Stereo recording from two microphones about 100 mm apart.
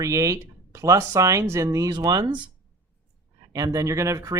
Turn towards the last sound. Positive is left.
turn(degrees=-30)  # may be behind; listen again after turning